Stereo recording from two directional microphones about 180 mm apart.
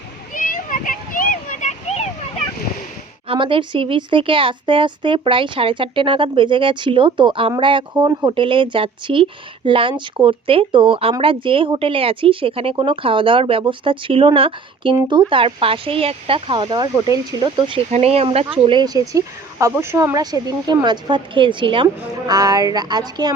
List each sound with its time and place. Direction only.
0.3 s a sound: 45° left (ahead or behind)
3.2 s speech: 30° right (ahead or behind)
17.9 s speech: 35° right (ahead or behind)